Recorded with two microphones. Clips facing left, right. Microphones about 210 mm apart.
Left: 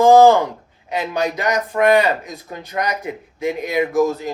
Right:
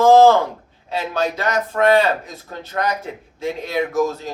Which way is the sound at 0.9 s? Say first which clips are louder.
Left 1 dB; 15° left (ahead or behind).